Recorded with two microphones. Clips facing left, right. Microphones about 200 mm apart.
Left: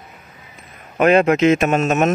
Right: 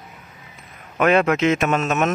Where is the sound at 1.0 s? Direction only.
30° left (ahead or behind).